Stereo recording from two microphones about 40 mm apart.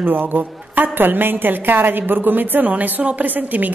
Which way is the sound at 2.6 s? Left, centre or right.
Right.